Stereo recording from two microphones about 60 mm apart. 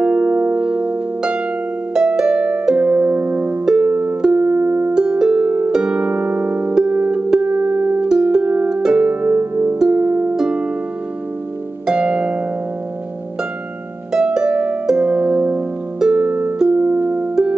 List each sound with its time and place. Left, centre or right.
0.0 s music: right
2.0 s harp: centre; by 3.5 s right
3.6 s music: centre
4.9 s music: centre
5.7 s harp: centre
6.7 s music: centre
8.1 s music: centre
8.8 s harp: centre; by 9.8 s right
9.8 s harp: centre
10.0 s music: right
11.8 s harp: centre
14.1 s harp: centre
16.0 s music: centre
16.8 s music: right